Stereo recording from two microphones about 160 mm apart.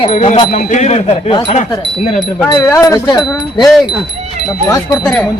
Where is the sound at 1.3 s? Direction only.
35° left (ahead or behind).